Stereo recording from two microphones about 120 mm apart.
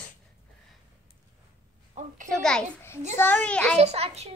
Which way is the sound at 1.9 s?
75° right (ahead or behind).